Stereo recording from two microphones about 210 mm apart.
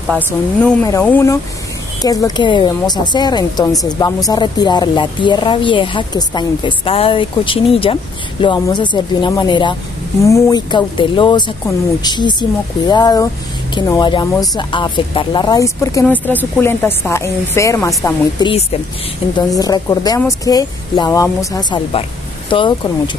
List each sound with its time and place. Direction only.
0.8 s speech: 10° left (ahead or behind)